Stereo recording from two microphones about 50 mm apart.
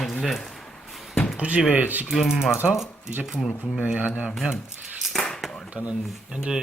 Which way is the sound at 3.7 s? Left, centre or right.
Right.